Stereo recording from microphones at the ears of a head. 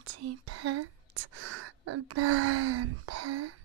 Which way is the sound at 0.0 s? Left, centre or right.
Right.